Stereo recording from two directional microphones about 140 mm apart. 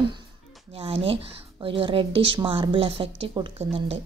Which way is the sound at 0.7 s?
45° right (ahead or behind).